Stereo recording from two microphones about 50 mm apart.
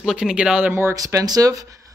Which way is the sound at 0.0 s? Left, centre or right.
Centre.